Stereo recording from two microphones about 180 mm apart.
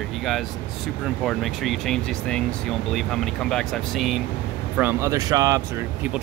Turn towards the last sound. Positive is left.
turn(degrees=-20)  # may be behind; listen again after turning